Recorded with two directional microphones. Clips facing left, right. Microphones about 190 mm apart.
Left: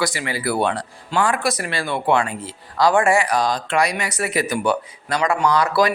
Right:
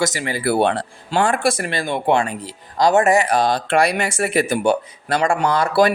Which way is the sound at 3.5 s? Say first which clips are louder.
Right 3 dB; 60° right (ahead or behind).